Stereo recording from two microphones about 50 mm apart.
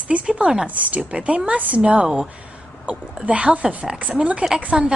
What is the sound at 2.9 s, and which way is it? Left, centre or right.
A woman's voice, right.